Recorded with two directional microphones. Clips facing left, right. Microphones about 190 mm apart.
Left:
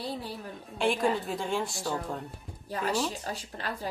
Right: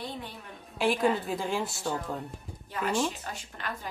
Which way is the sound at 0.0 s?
35° left (ahead or behind).